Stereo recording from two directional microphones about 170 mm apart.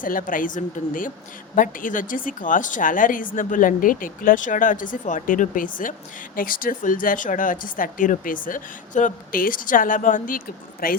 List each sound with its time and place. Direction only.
0.0 s speech: 50° left (ahead or behind)